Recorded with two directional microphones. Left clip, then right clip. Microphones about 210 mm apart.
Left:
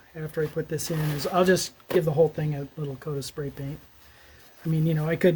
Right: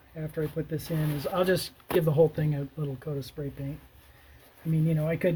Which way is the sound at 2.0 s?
10° left (ahead or behind).